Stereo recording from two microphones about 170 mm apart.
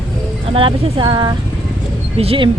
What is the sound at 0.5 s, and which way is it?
Speech, 30° right (ahead or behind).